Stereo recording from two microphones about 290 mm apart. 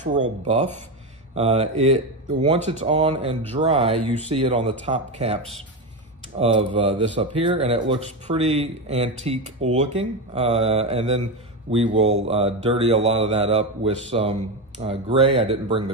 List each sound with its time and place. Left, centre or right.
0.4 s speech: right